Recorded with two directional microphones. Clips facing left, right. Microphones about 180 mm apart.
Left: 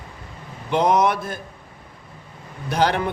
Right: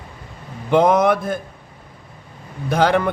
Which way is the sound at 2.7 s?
55° right (ahead or behind).